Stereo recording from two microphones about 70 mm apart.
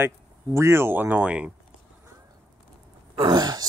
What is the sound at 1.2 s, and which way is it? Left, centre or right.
Speech, centre.